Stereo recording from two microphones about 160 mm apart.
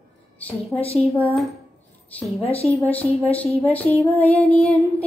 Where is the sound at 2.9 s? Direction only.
10° left (ahead or behind).